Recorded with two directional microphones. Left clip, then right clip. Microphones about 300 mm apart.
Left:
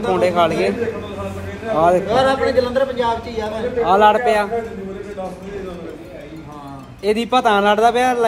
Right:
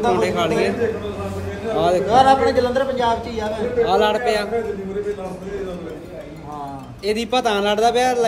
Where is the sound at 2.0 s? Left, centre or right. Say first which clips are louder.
Right 2 dB; centre.